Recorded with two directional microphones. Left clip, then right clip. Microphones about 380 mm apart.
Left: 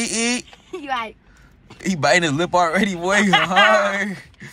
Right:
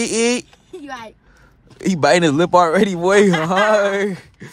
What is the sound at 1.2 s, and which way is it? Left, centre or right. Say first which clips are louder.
A man's voice: left 1 dB; right.